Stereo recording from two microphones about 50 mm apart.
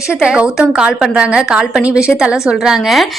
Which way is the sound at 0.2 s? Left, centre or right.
Centre.